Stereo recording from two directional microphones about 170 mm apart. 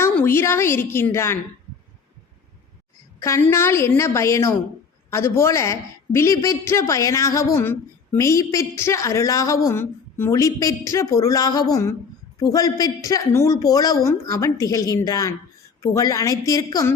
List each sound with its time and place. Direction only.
0.0 s a woman's voice: 15° left (ahead or behind)
3.2 s a woman's voice: 15° left (ahead or behind)